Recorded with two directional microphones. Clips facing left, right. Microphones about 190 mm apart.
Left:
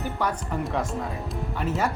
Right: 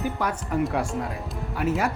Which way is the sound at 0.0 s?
5° right (ahead or behind).